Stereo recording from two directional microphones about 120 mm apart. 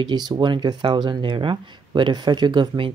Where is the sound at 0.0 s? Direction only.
35° right (ahead or behind).